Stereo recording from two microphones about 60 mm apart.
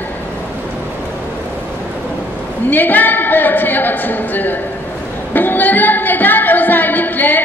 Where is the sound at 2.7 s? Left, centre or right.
Left.